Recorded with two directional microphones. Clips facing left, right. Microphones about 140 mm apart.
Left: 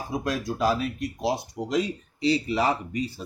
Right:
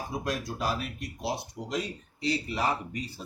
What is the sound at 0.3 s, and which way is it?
Speech, 90° left.